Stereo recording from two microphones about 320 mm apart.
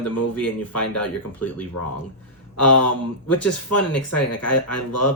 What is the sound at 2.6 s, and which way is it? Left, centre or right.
Speech, left.